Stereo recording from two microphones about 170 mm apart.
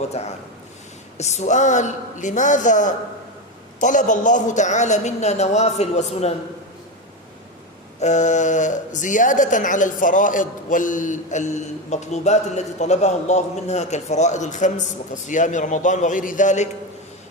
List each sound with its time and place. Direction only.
0.2 s a man's voice: 40° left (ahead or behind)
7.9 s speech: 45° left (ahead or behind)